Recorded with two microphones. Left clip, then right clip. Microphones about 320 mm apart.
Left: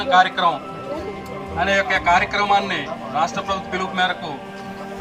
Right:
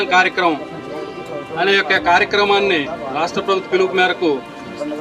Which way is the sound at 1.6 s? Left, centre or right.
Centre.